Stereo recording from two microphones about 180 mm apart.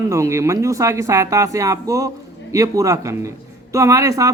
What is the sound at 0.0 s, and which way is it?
Speech, 15° right (ahead or behind).